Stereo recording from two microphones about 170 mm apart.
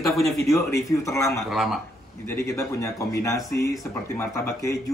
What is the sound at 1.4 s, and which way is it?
Speech, centre (ahead or behind).